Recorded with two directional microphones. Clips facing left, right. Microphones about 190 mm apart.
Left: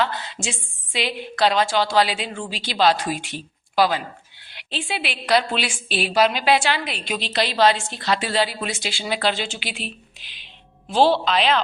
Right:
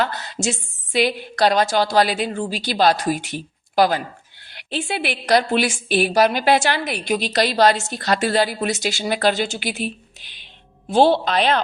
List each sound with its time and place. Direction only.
0.0 s a woman's voice: 40° right (ahead or behind)